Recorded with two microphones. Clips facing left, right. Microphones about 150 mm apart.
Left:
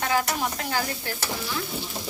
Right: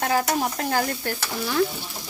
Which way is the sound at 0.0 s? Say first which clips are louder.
Right 3 dB; 40° right (ahead or behind).